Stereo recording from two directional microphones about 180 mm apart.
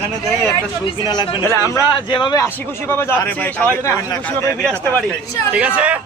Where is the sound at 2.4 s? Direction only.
15° left (ahead or behind).